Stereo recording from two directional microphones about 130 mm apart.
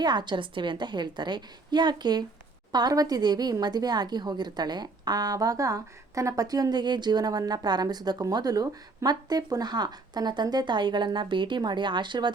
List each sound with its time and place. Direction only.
0.0 s a woman's voice: 35° right (ahead or behind)